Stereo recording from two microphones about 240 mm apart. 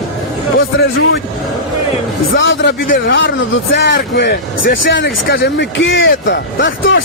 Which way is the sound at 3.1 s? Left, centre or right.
Left.